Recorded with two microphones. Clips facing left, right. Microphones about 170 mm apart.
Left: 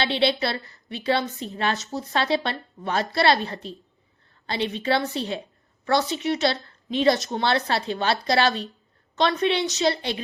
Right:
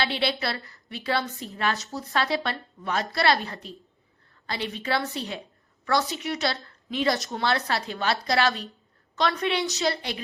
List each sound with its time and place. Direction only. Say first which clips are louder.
0.0 s a woman's voice: left 4 dB; 25° left (ahead or behind)